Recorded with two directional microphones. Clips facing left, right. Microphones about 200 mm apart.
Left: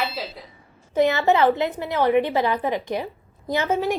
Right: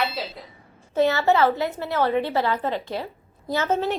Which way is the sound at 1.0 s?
15° left (ahead or behind).